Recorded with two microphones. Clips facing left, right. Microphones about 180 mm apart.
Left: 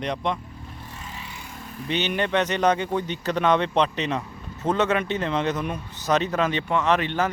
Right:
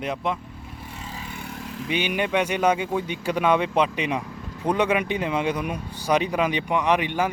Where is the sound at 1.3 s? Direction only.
65° right (ahead or behind); by 1.9 s 85° right.